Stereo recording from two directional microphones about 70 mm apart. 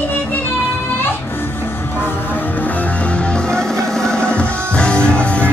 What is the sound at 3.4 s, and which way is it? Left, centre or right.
Music, centre.